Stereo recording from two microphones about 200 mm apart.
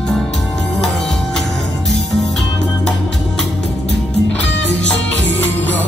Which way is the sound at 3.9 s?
60° left (ahead or behind).